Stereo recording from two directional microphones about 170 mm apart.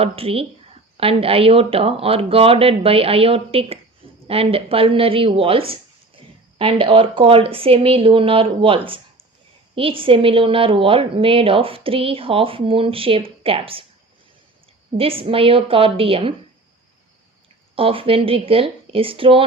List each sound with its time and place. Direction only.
0.0 s a woman's voice: 35° right (ahead or behind)
14.9 s a woman's voice: 35° right (ahead or behind)
17.7 s a woman's voice: 35° right (ahead or behind)